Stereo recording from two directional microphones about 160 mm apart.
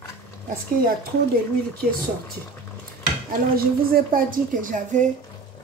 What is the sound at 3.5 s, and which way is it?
A woman's voice, 65° right (ahead or behind).